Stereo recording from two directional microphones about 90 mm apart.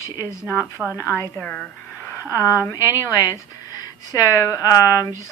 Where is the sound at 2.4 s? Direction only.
35° left (ahead or behind).